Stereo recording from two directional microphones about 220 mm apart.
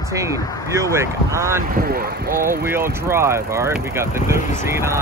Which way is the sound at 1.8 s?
40° right (ahead or behind).